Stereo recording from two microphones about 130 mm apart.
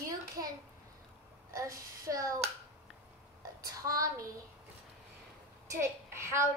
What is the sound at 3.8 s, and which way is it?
Speech, 25° right (ahead or behind).